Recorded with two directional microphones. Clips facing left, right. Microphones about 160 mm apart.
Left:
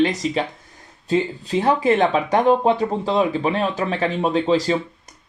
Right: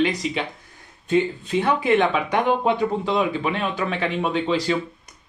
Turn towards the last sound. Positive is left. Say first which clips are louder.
# left 4 dB
turn(degrees=40)  # may be behind; listen again after turning